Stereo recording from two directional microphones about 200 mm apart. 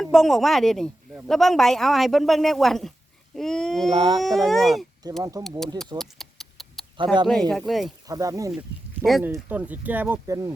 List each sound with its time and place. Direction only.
0.0 s speech: centre (ahead or behind)
3.9 s speech: 25° right (ahead or behind)
4.2 s speech: centre (ahead or behind)
6.0 s a sound: centre (ahead or behind)
6.9 s speech: 25° right (ahead or behind)
7.5 s speech: centre (ahead or behind)
8.0 s speech: 15° right (ahead or behind)
8.5 s speech: centre (ahead or behind)